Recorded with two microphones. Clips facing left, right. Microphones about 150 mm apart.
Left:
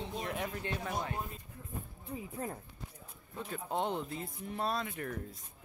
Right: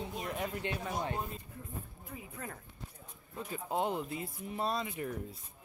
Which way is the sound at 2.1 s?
30° left (ahead or behind).